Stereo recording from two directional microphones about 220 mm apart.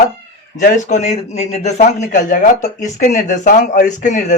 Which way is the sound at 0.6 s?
30° left (ahead or behind).